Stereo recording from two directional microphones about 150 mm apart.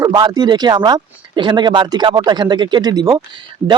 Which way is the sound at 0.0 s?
25° right (ahead or behind).